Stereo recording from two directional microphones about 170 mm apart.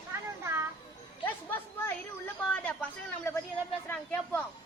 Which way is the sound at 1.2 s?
10° left (ahead or behind).